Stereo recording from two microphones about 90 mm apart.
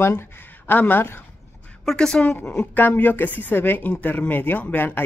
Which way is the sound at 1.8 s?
10° left (ahead or behind).